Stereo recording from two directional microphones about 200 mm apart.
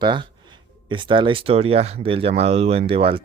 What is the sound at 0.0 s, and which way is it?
Speech, 25° right (ahead or behind).